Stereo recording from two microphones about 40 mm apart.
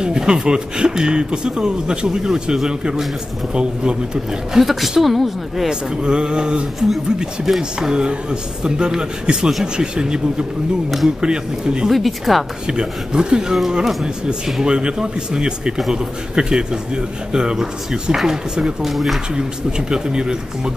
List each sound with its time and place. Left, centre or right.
0.0 s a man's voice: centre
4.6 s a woman's voice: centre
5.7 s a man's voice: right
11.9 s a woman's voice: centre
12.6 s a man's voice: centre
19.9 s a man's voice: right